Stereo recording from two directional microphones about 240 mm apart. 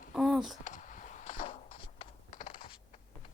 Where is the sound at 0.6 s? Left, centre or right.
Left.